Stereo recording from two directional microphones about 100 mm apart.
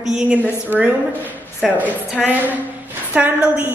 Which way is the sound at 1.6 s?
5° right (ahead or behind).